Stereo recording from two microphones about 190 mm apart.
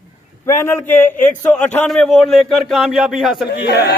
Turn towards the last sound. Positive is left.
turn(degrees=60)  # may be behind; listen again after turning